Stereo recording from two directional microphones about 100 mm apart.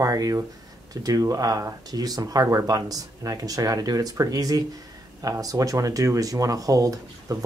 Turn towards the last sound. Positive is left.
turn(degrees=-35)  # may be behind; listen again after turning